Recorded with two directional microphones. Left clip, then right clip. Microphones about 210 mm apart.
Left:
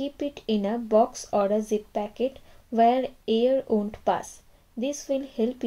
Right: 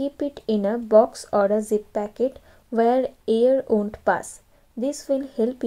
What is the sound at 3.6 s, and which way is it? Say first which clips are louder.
Speech: right 4 dB; 15° right (ahead or behind).